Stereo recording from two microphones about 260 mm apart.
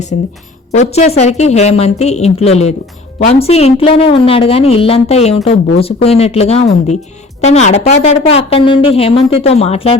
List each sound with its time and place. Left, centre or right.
0.7 s a woman's voice: left